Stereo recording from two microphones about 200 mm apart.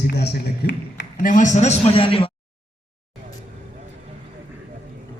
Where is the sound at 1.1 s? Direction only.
40° left (ahead or behind).